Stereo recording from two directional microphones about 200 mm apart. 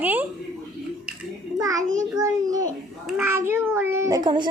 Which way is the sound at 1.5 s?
15° right (ahead or behind).